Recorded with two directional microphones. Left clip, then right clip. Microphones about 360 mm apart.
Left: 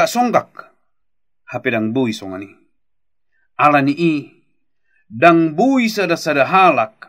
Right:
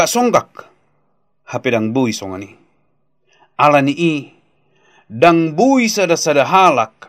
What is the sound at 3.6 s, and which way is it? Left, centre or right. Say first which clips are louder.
Speech: right 1 dB; centre.